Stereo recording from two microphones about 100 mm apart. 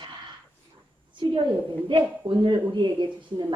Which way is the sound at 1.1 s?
55° right (ahead or behind).